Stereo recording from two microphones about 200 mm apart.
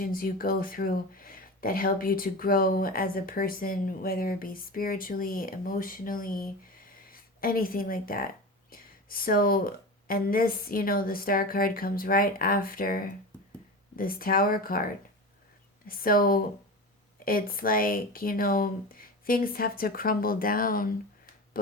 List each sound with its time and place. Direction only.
0.0 s speech: 45° left (ahead or behind)
15.9 s speech: 45° left (ahead or behind)